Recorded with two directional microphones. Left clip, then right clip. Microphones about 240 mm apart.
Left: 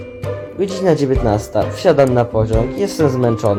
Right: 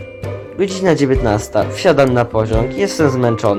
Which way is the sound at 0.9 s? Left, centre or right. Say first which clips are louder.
Right 1 dB; centre.